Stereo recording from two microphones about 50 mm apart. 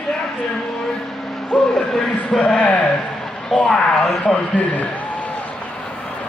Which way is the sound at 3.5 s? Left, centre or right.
Centre.